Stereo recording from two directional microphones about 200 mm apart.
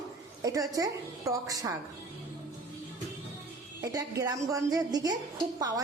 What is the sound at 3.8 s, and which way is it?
A woman's voice, 15° right (ahead or behind).